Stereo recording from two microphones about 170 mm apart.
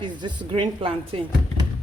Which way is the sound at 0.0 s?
25° right (ahead or behind).